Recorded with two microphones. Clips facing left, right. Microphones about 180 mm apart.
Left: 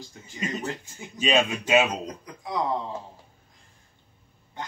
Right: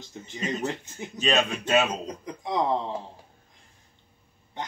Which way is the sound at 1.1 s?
10° left (ahead or behind).